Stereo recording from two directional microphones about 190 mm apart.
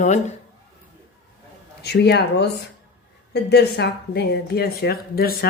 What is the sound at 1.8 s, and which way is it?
Speech, 60° left (ahead or behind).